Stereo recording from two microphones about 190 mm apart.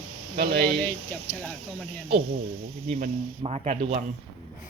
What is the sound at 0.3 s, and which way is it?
Speech, 55° right (ahead or behind).